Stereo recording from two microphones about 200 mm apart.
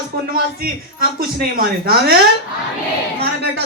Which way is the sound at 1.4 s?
50° right (ahead or behind).